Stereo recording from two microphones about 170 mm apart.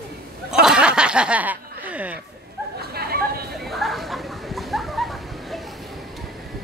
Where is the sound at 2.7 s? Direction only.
65° right (ahead or behind).